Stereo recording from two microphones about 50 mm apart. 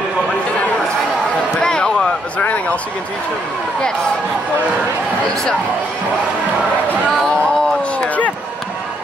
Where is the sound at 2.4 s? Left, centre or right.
Left.